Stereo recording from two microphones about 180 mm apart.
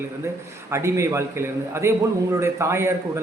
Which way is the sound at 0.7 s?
15° right (ahead or behind).